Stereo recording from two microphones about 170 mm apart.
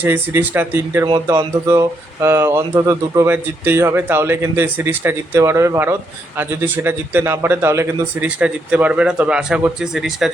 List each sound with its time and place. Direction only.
0.0 s speech: 10° right (ahead or behind)
1.0 s speech: 25° right (ahead or behind); by 10.3 s centre (ahead or behind)